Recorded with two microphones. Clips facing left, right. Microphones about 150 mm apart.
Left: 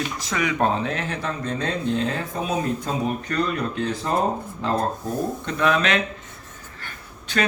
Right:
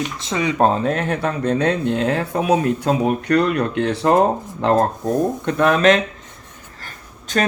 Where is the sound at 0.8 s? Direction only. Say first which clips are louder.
Right 7 dB; 50° right (ahead or behind); by 4.2 s 75° right (ahead or behind).